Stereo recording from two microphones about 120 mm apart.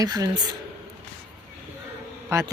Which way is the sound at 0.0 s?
30° right (ahead or behind).